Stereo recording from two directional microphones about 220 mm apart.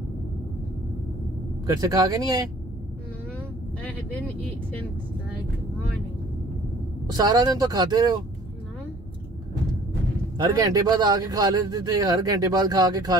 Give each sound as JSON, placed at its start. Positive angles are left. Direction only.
{"t": 1.8, "sound": "speech", "side_deg": -15}
{"t": 7.1, "sound": "speech", "side_deg": -15}
{"t": 10.3, "sound": "speech", "side_deg": -15}